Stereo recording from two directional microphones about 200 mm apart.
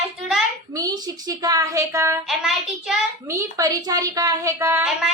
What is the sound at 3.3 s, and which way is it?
A woman's voice, 15° right (ahead or behind).